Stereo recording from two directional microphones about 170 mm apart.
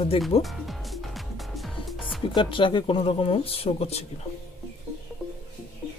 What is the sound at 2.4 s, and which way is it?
Speech, 30° left (ahead or behind).